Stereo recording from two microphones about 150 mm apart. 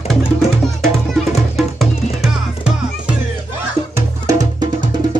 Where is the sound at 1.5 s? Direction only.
Centre (ahead or behind).